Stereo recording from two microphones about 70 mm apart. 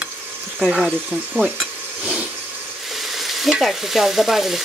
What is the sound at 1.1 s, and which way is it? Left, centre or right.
Stir, centre.